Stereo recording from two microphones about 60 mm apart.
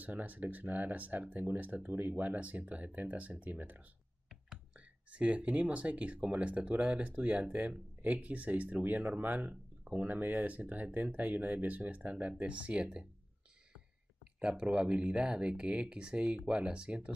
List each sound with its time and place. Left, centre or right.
0.0 s speech: right